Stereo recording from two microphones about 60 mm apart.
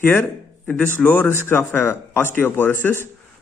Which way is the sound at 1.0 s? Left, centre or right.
Left.